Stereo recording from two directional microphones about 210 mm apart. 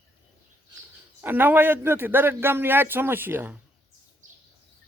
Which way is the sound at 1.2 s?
10° right (ahead or behind).